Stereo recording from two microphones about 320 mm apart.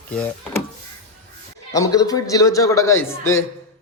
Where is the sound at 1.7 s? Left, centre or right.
Centre.